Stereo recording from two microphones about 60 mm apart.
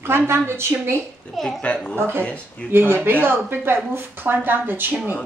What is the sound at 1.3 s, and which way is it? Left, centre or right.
Speech, centre.